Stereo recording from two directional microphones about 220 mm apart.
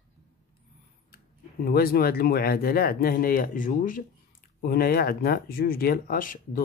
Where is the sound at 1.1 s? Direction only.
45° left (ahead or behind).